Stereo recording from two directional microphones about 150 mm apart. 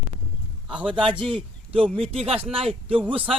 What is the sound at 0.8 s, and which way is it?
Speech, 35° right (ahead or behind).